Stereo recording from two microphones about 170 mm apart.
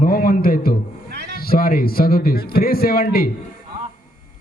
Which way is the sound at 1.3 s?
60° left (ahead or behind).